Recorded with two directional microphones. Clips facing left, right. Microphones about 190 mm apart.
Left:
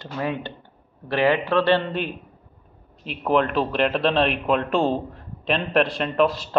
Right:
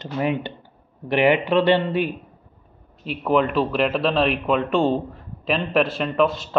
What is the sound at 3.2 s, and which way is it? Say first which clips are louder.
Speech: right 1 dB; centre (ahead or behind).